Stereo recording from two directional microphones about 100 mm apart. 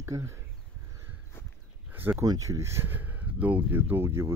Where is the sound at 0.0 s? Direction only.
30° right (ahead or behind).